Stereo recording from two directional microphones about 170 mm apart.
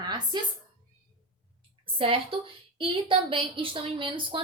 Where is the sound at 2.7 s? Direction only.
30° right (ahead or behind).